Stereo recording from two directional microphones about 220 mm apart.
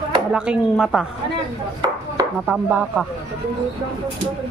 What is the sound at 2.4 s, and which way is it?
Speech, 5° right (ahead or behind).